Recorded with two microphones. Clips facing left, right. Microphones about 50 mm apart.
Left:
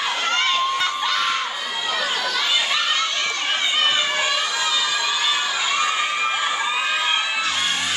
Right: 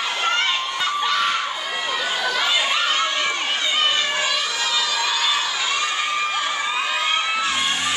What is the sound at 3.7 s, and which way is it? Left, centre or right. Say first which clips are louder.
Crowd: even; centre.